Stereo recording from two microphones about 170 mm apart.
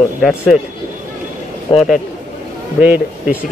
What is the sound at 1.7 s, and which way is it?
Speech, 30° left (ahead or behind).